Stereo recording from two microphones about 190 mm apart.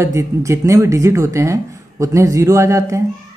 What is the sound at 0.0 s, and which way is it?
Speech, 15° right (ahead or behind).